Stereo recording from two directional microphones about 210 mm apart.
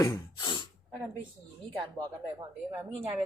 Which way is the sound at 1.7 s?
25° right (ahead or behind).